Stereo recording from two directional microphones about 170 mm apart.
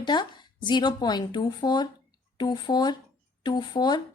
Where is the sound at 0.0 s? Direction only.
25° left (ahead or behind).